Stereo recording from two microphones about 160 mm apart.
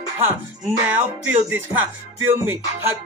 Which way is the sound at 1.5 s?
10° right (ahead or behind).